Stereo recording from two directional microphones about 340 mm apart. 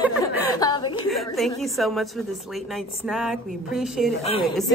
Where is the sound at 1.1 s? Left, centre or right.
Centre.